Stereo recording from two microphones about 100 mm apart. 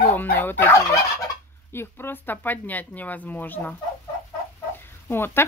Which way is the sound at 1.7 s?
25° left (ahead or behind).